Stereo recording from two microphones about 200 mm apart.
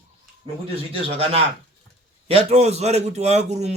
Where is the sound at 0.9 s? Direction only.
25° right (ahead or behind).